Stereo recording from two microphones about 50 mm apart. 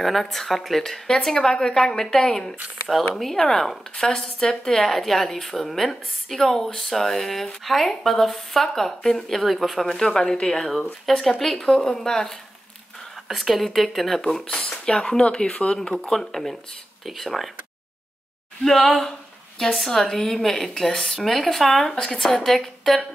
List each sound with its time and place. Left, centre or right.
0.0 s a woman's voice: centre
10.4 s a woman's voice: centre
13.3 s a woman's voice: centre
14.2 s speech: centre
15.9 s a woman's voice: centre
18.6 s a woman's voice: centre